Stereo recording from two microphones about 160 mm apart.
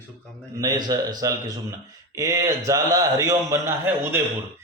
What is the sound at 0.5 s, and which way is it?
A man's voice, 25° right (ahead or behind).